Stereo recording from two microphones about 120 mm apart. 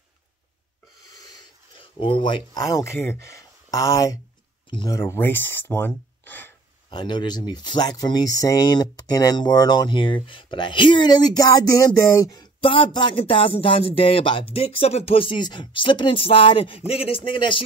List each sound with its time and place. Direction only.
1.8 s speech: 45° left (ahead or behind)
2.7 s speech: 20° left (ahead or behind)
4.6 s speech: 40° left (ahead or behind)
4.9 s speech: 25° left (ahead or behind)
6.9 s speech: 40° left (ahead or behind)
12.3 s speech: 40° left (ahead or behind)
14.5 s speech: 55° left (ahead or behind)